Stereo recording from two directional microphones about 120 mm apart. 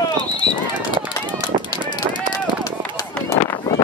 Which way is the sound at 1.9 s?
30° left (ahead or behind).